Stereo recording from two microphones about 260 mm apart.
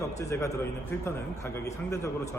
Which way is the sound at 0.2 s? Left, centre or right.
Centre.